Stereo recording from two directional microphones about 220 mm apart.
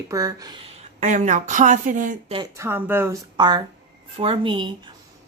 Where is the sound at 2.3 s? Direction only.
15° right (ahead or behind).